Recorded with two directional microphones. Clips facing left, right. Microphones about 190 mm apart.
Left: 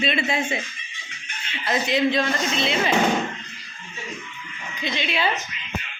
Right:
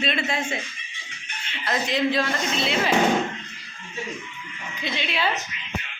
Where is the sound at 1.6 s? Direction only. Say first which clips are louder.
Left 2 dB; centre (ahead or behind).